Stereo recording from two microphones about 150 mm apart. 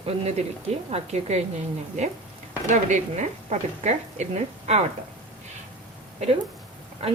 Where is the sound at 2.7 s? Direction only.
55° right (ahead or behind).